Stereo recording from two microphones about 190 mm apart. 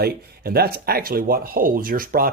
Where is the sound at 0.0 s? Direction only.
55° right (ahead or behind).